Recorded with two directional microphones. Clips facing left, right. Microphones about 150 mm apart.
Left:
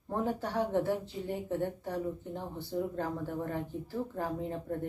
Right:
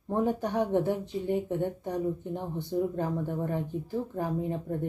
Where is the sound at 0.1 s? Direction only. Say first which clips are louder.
Right 5 dB; 15° right (ahead or behind).